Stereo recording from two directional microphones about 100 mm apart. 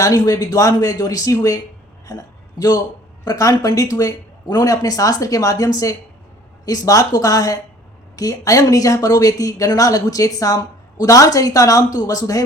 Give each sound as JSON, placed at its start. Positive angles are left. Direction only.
{"t": 0.0, "sound": "a man's voice", "side_deg": 35}